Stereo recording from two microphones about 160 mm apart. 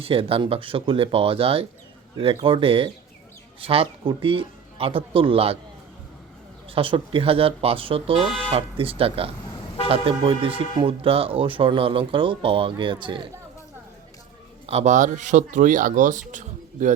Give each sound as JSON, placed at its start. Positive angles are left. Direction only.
{"t": 0.0, "sound": "speech", "side_deg": -35}
{"t": 6.7, "sound": "speech", "side_deg": -35}
{"t": 14.7, "sound": "speech", "side_deg": -45}
{"t": 16.3, "sound": "a sound", "side_deg": -50}